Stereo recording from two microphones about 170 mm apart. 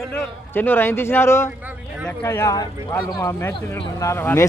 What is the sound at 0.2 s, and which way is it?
A man's voice, 10° left (ahead or behind).